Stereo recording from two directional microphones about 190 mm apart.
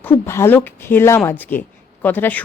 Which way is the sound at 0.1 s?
10° left (ahead or behind).